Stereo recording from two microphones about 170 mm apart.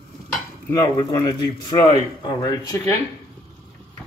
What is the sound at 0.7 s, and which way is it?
Speech, 20° left (ahead or behind).